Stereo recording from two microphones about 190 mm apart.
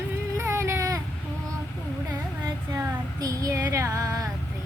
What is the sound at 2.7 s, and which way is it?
Child singing, 20° right (ahead or behind).